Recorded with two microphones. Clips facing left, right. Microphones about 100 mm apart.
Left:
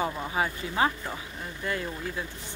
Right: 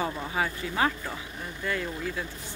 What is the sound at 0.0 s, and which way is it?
Speech, 25° left (ahead or behind).